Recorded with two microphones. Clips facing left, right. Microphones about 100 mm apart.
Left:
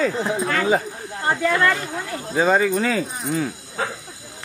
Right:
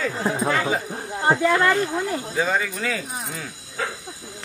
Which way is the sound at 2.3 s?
40° left (ahead or behind).